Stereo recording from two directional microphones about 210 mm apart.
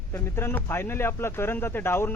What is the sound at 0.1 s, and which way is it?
Speech, 10° left (ahead or behind).